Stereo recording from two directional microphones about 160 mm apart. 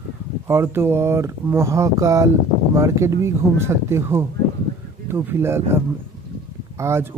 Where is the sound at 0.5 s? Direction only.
15° right (ahead or behind).